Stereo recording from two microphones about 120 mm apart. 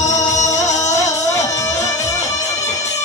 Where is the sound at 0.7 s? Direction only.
25° left (ahead or behind).